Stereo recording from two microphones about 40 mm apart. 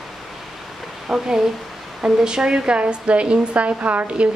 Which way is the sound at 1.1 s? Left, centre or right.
Centre.